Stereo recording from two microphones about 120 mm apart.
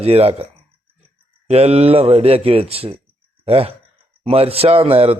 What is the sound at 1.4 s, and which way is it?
A man's voice, 60° right (ahead or behind).